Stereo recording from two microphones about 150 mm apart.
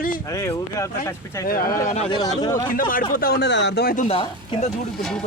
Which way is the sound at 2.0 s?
35° left (ahead or behind).